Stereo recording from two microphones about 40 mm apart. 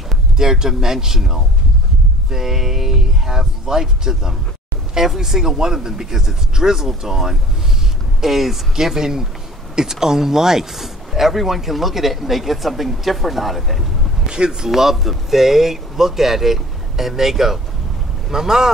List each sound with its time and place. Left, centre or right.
0.4 s speech: centre
14.2 s speech: right
14.7 s speech: centre